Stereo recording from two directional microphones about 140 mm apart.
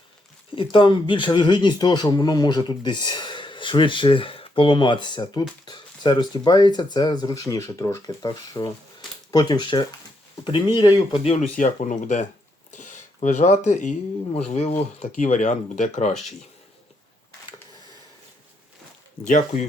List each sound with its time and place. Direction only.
0.5 s speech: 35° left (ahead or behind)
11.1 s speech: 40° left (ahead or behind)
11.3 s speech: 60° left (ahead or behind)
19.3 s speech: 55° left (ahead or behind)